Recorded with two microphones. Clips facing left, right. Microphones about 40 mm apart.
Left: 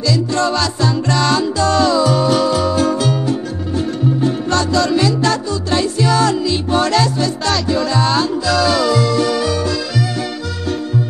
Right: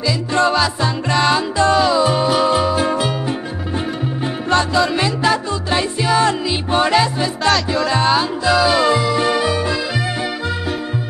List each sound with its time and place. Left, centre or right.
0.1 s music: right